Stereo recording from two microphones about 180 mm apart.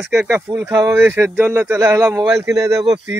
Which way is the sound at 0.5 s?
15° right (ahead or behind).